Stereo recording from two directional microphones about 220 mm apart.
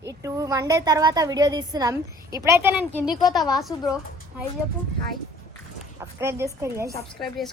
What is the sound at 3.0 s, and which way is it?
Speech, 20° left (ahead or behind).